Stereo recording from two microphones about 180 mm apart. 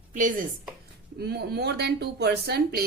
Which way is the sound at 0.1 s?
45° right (ahead or behind).